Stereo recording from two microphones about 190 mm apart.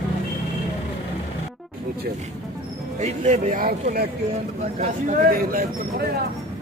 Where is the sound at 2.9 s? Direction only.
40° right (ahead or behind).